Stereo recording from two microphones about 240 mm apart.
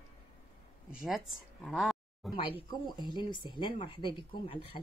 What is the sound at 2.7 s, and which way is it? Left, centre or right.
Speech, centre.